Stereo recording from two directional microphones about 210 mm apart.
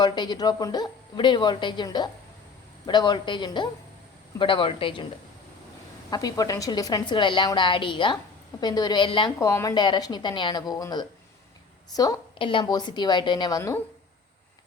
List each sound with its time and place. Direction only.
0.0 s a woman's voice: 20° left (ahead or behind)
6.1 s a woman's voice: 20° left (ahead or behind)